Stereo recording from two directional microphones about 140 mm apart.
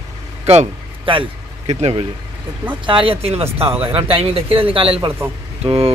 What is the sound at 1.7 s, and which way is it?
Speech, 50° right (ahead or behind).